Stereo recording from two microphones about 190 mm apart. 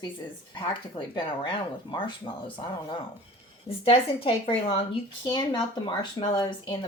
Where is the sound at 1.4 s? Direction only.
25° left (ahead or behind).